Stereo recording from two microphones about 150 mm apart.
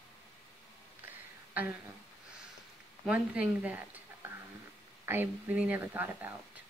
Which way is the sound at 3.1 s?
10° right (ahead or behind).